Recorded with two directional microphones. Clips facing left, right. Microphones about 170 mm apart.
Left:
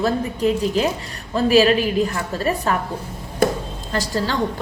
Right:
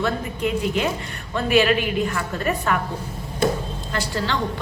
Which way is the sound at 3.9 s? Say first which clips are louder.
Left 3 dB; 40° left (ahead or behind).